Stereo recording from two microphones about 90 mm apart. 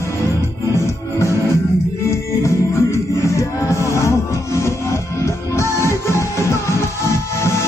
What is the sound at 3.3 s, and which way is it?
Music, 35° left (ahead or behind).